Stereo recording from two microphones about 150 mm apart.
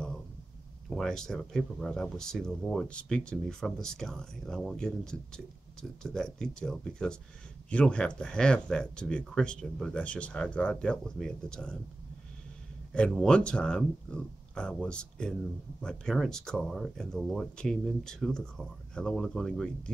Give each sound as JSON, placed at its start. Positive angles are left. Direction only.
{"t": 0.8, "sound": "speech", "side_deg": 5}
{"t": 12.9, "sound": "speech", "side_deg": 5}